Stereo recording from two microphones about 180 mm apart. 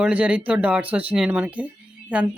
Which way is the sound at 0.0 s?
10° right (ahead or behind).